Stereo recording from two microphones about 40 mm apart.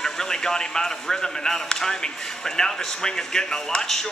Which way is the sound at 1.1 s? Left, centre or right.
Centre.